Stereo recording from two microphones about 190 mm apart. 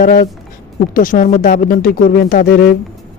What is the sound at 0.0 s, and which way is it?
A man's voice, 50° left (ahead or behind).